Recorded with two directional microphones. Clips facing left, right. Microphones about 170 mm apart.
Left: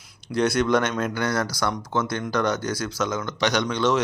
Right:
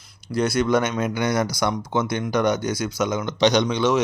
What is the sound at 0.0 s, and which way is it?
Speech, centre (ahead or behind).